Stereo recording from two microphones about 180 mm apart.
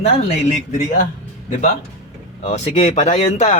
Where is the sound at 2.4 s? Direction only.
40° left (ahead or behind).